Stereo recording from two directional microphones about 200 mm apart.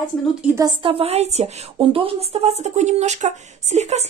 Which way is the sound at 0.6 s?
25° right (ahead or behind).